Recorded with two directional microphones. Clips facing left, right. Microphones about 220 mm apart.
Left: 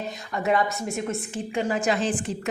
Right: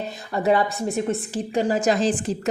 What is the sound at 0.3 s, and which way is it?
A woman's voice, 35° right (ahead or behind).